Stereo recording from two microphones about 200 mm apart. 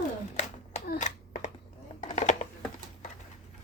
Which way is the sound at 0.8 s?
45° left (ahead or behind).